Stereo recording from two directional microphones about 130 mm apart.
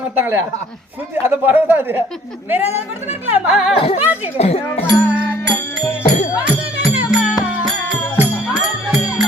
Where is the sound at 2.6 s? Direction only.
55° left (ahead or behind).